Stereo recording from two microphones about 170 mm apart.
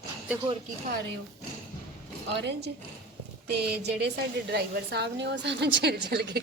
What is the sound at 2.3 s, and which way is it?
A woman's voice, 85° right.